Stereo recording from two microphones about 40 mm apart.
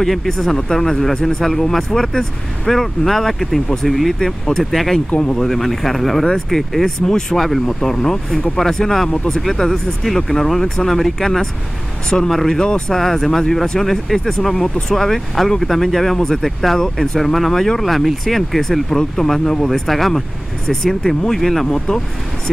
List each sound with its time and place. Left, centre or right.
0.0 s speech: centre
7.3 s speech: centre
7.6 s speech: centre
12.6 s speech: left
12.9 s speech: centre
19.5 s speech: left
19.9 s speech: centre
21.7 s speech: centre